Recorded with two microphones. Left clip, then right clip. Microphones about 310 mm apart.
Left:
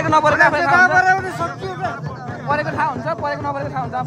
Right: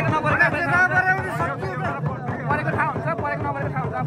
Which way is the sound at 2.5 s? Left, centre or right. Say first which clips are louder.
Left 4 dB; left.